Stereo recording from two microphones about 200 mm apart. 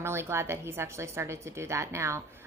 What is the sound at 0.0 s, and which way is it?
A woman's voice, 15° right (ahead or behind).